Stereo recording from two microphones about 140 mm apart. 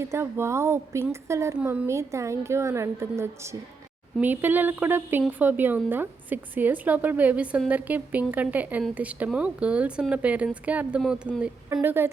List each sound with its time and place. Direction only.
0.0 s a woman's voice: 20° right (ahead or behind)